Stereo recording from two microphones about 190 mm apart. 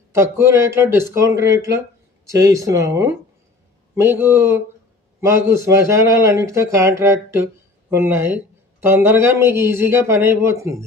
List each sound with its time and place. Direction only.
0.1 s speech: 15° right (ahead or behind)